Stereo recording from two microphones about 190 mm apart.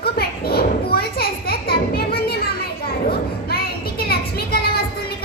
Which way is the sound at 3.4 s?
55° left (ahead or behind).